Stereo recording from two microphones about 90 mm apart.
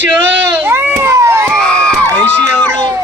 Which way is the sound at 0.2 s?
25° right (ahead or behind).